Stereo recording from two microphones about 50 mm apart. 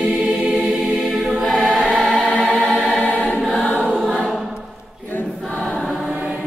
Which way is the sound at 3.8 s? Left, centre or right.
Centre.